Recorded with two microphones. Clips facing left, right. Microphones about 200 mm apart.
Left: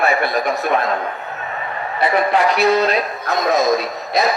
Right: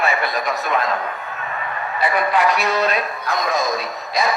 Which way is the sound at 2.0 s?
25° left (ahead or behind).